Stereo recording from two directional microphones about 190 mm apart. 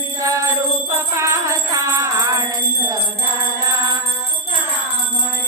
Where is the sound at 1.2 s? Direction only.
15° right (ahead or behind).